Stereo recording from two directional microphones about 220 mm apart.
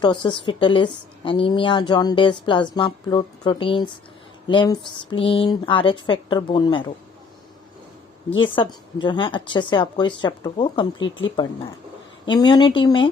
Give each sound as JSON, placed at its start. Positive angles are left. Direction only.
{"t": 0.0, "sound": "a woman's voice", "side_deg": 20}
{"t": 8.4, "sound": "a woman's voice", "side_deg": 20}
{"t": 12.2, "sound": "a woman's voice", "side_deg": 20}